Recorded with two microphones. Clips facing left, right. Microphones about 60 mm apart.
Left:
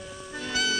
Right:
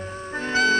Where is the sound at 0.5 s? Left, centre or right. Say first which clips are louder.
Right 8 dB; right.